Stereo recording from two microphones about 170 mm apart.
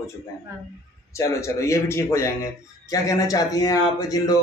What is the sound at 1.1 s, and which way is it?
A man's voice, 15° left (ahead or behind).